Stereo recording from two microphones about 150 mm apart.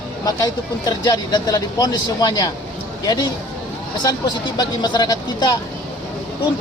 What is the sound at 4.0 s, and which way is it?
Speech, 25° left (ahead or behind).